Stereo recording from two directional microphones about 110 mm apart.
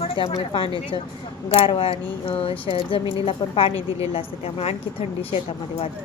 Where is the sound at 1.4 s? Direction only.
50° left (ahead or behind).